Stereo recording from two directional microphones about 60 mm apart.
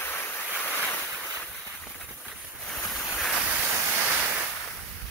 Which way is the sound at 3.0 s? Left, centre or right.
Centre.